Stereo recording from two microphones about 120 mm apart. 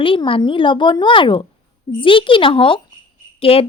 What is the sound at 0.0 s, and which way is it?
Speech, 45° left (ahead or behind).